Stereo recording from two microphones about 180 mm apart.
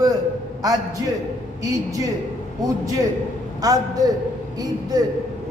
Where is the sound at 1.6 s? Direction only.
20° right (ahead or behind).